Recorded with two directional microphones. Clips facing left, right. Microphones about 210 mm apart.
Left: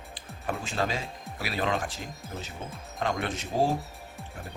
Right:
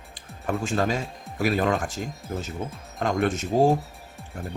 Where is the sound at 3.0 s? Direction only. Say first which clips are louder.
Right 6 dB; 45° right (ahead or behind).